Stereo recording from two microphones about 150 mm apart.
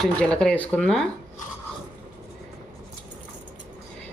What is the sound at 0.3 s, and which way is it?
Speech, 10° left (ahead or behind).